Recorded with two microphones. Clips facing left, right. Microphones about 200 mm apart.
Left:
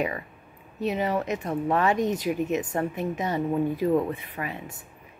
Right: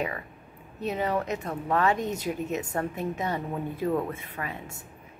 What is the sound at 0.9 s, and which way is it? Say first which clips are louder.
A woman's voice: even; 15° left (ahead or behind).